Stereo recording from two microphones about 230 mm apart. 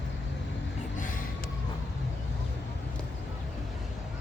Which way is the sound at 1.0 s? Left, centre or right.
Left.